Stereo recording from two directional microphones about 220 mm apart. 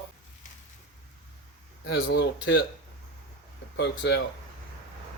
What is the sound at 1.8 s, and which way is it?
Speech, 55° left (ahead or behind).